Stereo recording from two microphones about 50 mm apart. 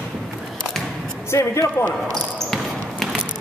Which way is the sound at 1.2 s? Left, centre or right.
Left.